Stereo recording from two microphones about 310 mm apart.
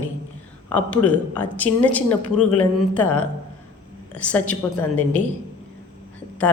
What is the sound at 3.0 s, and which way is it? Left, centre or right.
Speech, left.